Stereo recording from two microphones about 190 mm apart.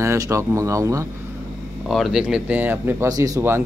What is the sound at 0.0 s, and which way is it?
A man's voice, 15° right (ahead or behind).